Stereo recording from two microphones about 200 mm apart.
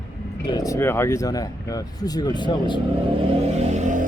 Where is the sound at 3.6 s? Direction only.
35° right (ahead or behind).